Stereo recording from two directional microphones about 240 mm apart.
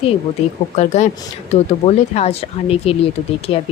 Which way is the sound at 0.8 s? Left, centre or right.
Left.